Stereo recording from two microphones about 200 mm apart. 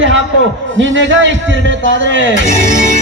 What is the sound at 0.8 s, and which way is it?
A man's voice, 65° right (ahead or behind).